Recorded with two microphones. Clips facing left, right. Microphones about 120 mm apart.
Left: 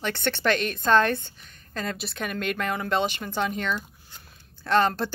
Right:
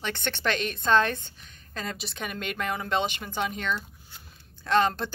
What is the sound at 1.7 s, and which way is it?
A woman's voice, 5° right (ahead or behind).